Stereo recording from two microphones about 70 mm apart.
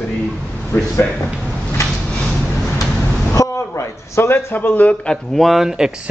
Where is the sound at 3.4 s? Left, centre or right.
Left.